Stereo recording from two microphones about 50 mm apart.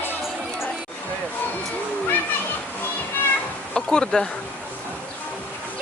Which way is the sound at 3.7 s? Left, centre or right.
Centre.